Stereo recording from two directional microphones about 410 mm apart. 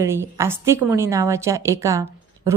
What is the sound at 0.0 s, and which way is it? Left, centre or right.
A woman's voice, centre.